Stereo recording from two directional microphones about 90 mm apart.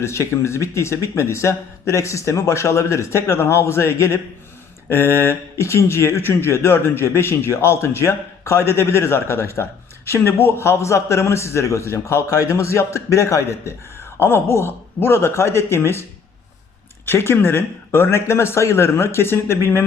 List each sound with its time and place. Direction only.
0.0 s a man's voice: 30° left (ahead or behind)
17.1 s speech: 25° left (ahead or behind)